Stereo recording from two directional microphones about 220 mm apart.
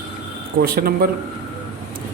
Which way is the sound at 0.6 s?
45° right (ahead or behind).